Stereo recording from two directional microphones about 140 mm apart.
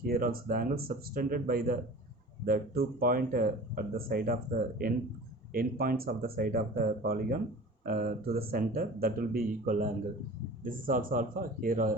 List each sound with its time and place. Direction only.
0.0 s speech: 90° right